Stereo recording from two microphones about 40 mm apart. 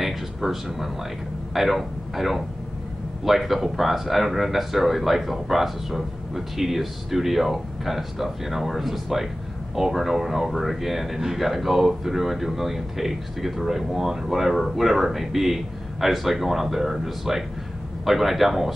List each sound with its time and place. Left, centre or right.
0.0 s speech: centre